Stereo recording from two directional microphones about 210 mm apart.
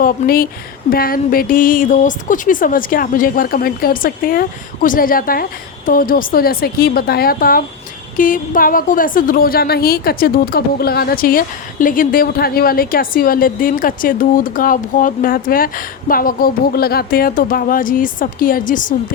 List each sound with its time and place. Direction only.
0.0 s a woman's voice: 45° left (ahead or behind)